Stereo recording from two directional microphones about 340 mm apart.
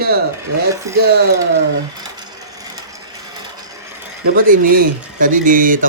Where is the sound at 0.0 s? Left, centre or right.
Right.